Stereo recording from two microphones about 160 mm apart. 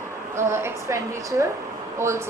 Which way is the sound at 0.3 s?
15° right (ahead or behind).